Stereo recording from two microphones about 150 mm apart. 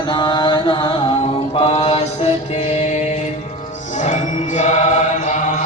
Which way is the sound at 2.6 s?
50° left (ahead or behind).